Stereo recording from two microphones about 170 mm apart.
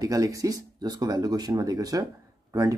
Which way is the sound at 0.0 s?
20° right (ahead or behind).